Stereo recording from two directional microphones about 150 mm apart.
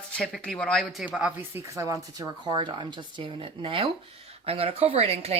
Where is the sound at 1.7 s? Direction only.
20° right (ahead or behind).